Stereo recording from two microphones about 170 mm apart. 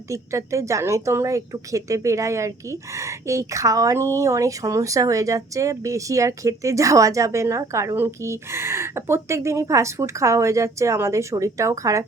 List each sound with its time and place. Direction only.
0.1 s a woman's voice: 15° right (ahead or behind)